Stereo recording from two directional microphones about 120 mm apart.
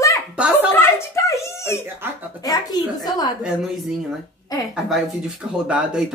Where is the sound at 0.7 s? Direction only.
20° left (ahead or behind).